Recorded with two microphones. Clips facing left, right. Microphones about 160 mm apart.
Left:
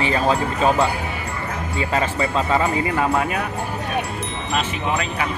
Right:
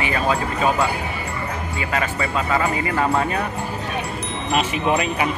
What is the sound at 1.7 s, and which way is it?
Speech, 30° left (ahead or behind).